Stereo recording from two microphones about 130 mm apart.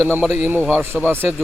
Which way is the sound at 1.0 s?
15° right (ahead or behind).